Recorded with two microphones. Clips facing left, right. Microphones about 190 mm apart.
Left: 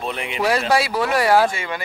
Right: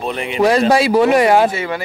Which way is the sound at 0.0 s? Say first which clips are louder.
Right 5 dB; 40° right (ahead or behind).